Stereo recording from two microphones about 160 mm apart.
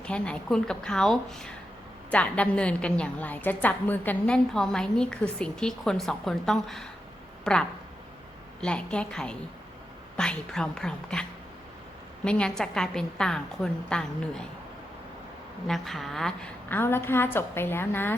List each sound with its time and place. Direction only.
0.0 s a woman's voice: 5° left (ahead or behind)
8.6 s a woman's voice: 5° left (ahead or behind)
15.6 s a woman's voice: centre (ahead or behind)